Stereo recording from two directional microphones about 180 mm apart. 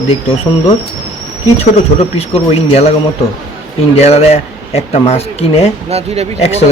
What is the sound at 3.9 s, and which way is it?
Speech, 35° left (ahead or behind).